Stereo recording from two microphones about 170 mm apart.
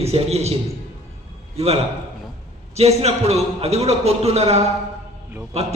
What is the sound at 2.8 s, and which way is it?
A man's voice, 40° right (ahead or behind).